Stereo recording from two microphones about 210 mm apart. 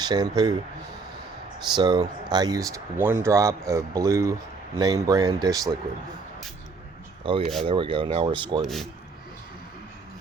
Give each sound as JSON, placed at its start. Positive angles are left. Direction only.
{"t": 0.0, "sound": "speech", "side_deg": -20}
{"t": 1.7, "sound": "speech", "side_deg": -20}
{"t": 7.3, "sound": "speech", "side_deg": -25}
{"t": 8.6, "sound": "speech", "side_deg": 0}